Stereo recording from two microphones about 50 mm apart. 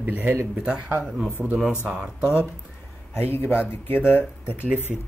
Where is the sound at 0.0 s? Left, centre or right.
Right.